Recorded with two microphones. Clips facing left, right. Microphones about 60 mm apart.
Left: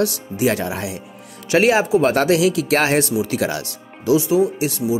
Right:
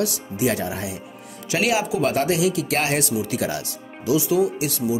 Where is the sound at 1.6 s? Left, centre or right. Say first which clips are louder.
Left 6 dB; left.